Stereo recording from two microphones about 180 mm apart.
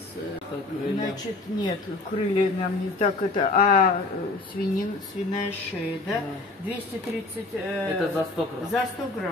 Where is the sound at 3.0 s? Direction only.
40° left (ahead or behind).